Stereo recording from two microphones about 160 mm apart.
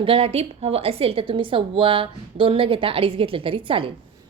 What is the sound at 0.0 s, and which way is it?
A woman's voice, 35° right (ahead or behind).